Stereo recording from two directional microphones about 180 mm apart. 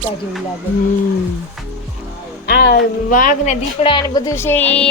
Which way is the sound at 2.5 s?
60° left (ahead or behind).